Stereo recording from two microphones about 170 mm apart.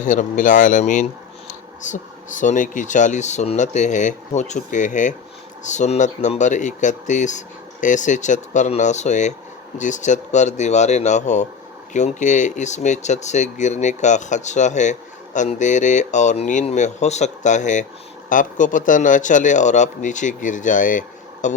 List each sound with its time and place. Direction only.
0.0 s speech: 50° left (ahead or behind)